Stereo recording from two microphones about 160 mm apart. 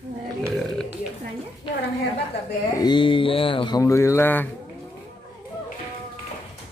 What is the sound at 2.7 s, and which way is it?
Speech, 30° left (ahead or behind).